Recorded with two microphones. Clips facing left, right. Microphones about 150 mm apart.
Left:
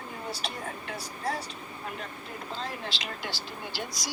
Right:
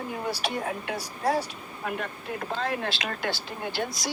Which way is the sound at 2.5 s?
65° right (ahead or behind).